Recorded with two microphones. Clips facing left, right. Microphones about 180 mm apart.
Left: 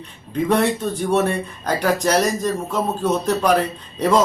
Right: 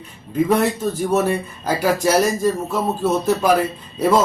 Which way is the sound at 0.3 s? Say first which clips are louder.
Right 1 dB; 5° right (ahead or behind).